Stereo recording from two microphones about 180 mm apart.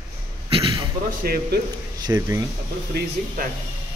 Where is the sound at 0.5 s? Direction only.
30° right (ahead or behind).